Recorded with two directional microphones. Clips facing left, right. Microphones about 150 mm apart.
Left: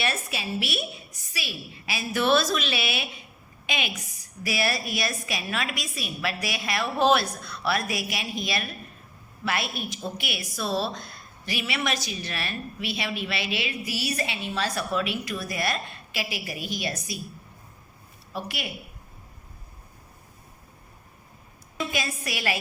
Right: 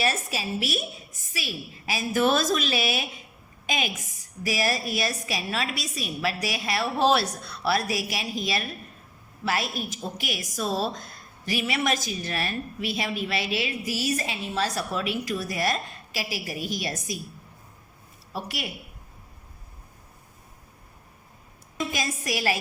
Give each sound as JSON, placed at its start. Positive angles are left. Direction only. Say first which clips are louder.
{"t": 0.0, "sound": "a woman's voice", "louder": "right 2 dB", "side_deg": -40}
{"t": 18.3, "sound": "a woman's voice", "louder": "even", "side_deg": -40}
{"t": 21.9, "sound": "a woman's voice", "louder": "right 3 dB", "side_deg": -40}